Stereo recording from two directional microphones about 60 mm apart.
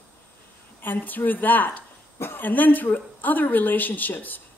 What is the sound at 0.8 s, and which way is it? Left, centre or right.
A woman's voice, left.